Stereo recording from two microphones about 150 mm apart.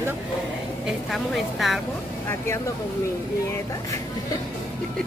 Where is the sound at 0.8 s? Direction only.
Centre (ahead or behind).